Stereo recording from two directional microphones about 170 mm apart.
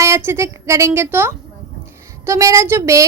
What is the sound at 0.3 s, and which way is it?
A child's voice, 15° right (ahead or behind).